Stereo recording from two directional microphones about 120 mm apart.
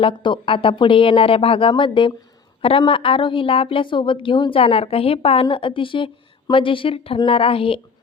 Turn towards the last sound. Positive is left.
turn(degrees=50)  # may be behind; listen again after turning